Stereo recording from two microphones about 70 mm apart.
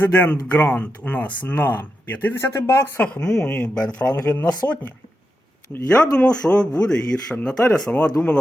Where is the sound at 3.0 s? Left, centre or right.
Centre.